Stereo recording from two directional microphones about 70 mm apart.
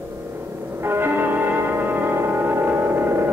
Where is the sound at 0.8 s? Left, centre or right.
Right.